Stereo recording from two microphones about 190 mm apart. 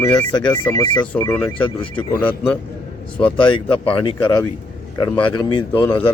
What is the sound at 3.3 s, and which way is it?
Speech, 25° left (ahead or behind).